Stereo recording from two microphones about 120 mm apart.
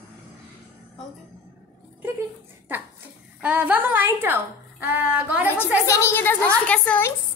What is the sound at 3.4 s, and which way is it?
A woman's voice, 15° right (ahead or behind).